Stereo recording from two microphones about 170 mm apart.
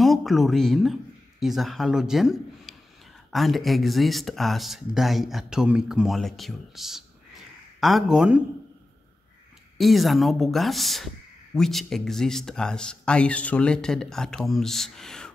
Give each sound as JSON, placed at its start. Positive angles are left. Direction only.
{"t": 0.0, "sound": "speech", "side_deg": 0}
{"t": 9.8, "sound": "speech", "side_deg": 0}